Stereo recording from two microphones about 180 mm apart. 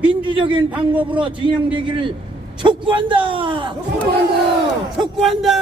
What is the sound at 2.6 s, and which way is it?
A man's voice, 25° right (ahead or behind).